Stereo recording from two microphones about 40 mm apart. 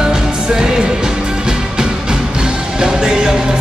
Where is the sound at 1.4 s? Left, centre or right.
Centre.